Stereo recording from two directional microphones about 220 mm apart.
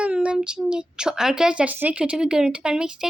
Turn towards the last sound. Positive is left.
turn(degrees=-5)  # may be behind; listen again after turning